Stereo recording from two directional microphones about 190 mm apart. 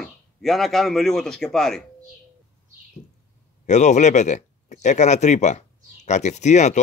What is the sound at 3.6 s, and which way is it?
Speech, 40° left (ahead or behind).